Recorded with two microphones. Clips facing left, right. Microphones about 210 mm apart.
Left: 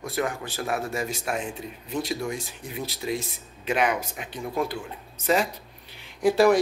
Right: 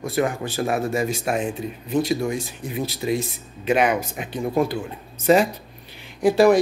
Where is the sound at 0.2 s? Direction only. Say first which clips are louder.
Right 6 dB; 10° right (ahead or behind).